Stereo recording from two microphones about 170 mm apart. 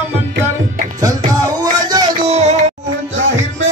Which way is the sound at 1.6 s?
25° right (ahead or behind).